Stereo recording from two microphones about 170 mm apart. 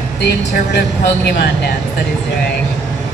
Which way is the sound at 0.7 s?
80° left.